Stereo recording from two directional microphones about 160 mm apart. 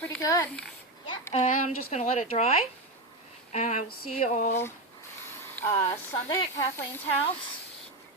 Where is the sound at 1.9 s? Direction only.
50° left (ahead or behind).